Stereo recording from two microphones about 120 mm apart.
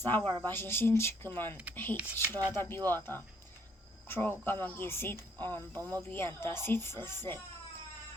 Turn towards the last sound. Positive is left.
turn(degrees=20)  # may be behind; listen again after turning